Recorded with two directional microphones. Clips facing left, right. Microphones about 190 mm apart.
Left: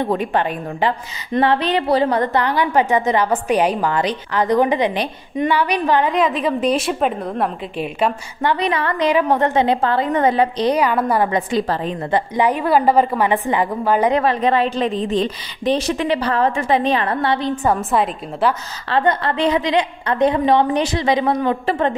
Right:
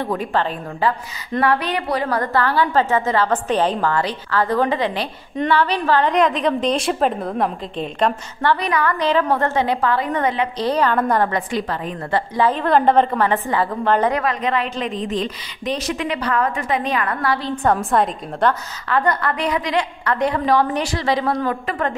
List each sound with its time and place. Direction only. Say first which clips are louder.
0.0 s a woman's voice: left 2 dB; 20° left (ahead or behind)
6.1 s a woman's voice: right 1 dB; 5° left (ahead or behind); by 10.5 s 30° left (ahead or behind)
10.6 s a woman's voice: left 2 dB; 15° left (ahead or behind)
11.3 s a woman's voice: left 4 dB; 30° left (ahead or behind)
12.1 s a woman's voice: left 1 dB; 15° left (ahead or behind)
14.1 s a woman's voice: left 4 dB; 30° left (ahead or behind)
17.6 s a woman's voice: right 1 dB; 5° left (ahead or behind)
18.9 s a woman's voice: left 2 dB; 25° left (ahead or behind)